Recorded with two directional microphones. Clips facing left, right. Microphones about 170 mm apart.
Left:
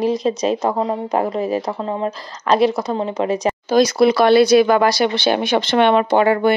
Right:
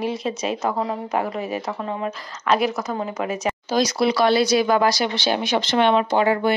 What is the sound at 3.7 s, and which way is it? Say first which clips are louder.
Speech: left 7 dB; 55° left (ahead or behind).